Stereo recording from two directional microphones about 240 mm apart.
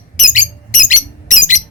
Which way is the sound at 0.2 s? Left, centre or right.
Left.